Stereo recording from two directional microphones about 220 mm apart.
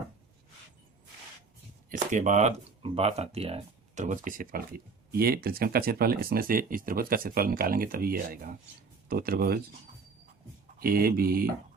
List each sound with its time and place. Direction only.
1.9 s speech: 35° right (ahead or behind)
10.8 s speech: 40° right (ahead or behind)